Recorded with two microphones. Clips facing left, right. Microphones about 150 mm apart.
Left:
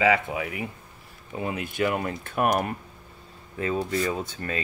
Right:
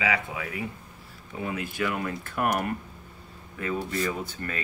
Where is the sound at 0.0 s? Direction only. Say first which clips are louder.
Left 6 dB; 30° left (ahead or behind).